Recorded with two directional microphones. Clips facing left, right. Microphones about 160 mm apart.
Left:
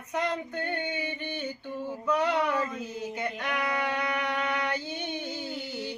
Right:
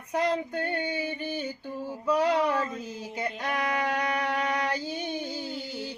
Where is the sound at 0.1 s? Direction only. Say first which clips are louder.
Right 3 dB; 35° right (ahead or behind).